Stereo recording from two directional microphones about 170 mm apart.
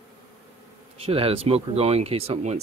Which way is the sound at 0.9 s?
35° right (ahead or behind).